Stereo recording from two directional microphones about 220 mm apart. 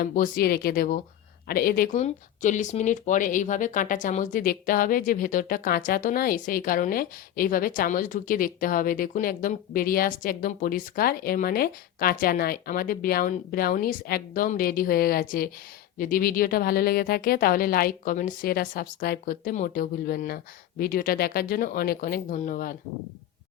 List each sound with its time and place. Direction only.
0.0 s speech: 40° left (ahead or behind)